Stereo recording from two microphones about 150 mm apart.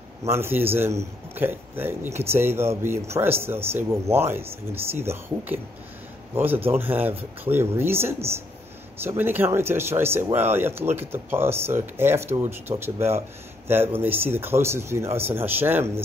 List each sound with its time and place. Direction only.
0.2 s speech: 15° right (ahead or behind)